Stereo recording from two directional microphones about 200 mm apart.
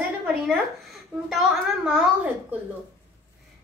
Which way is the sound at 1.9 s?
5° right (ahead or behind).